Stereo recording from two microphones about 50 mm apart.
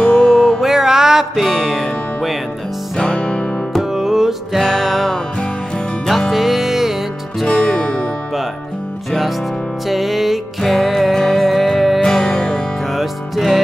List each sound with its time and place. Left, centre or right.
0.1 s music: centre
3.0 s music: centre
3.9 s music: centre
9.8 s music: centre
12.9 s music: centre